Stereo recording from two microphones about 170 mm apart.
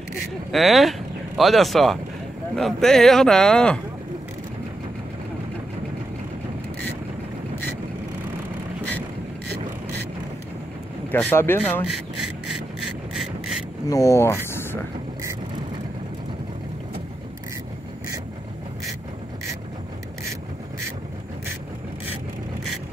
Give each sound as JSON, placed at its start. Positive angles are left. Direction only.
{"t": 0.5, "sound": "speech", "side_deg": 0}
{"t": 11.1, "sound": "speech", "side_deg": 10}
{"t": 11.9, "sound": "rub", "side_deg": 0}
{"t": 13.8, "sound": "speech", "side_deg": 20}
{"t": 14.5, "sound": "vehicle", "side_deg": 15}